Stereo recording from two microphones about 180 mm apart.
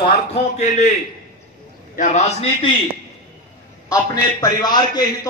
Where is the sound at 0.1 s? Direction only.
40° left (ahead or behind).